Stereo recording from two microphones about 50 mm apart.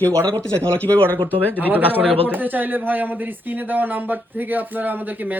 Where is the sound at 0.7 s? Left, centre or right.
Left.